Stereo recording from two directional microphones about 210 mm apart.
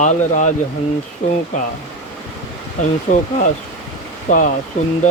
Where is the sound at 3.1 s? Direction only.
35° left (ahead or behind).